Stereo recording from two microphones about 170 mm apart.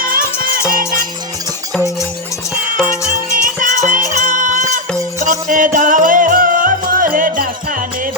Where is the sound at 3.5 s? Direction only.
50° right (ahead or behind).